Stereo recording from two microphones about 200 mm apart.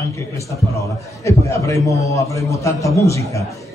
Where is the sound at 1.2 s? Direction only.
15° left (ahead or behind).